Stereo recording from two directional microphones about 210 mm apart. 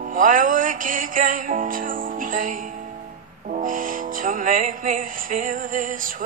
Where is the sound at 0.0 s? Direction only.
40° right (ahead or behind).